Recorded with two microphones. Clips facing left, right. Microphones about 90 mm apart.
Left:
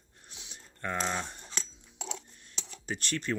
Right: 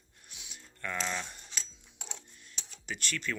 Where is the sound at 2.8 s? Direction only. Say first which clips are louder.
Left 3 dB; 35° left (ahead or behind).